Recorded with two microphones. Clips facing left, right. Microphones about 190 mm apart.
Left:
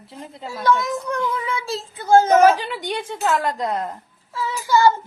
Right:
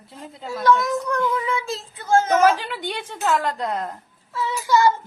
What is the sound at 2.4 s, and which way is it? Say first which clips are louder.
Speech: left 3 dB; 10° left (ahead or behind).